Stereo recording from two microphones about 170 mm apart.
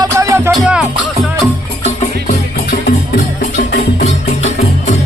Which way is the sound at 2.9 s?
80° left.